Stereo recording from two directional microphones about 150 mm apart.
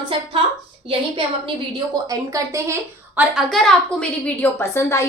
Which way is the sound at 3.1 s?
Centre (ahead or behind).